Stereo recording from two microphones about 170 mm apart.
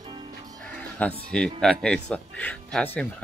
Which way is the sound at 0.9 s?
5° left (ahead or behind).